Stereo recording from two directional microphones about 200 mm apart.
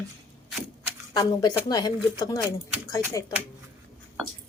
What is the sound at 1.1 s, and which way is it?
A woman's voice, 20° left (ahead or behind).